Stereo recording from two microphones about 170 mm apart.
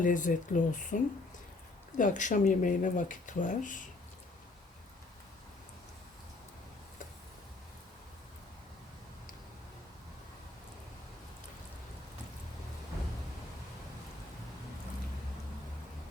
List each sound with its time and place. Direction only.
0.0 s speech: 50° left (ahead or behind)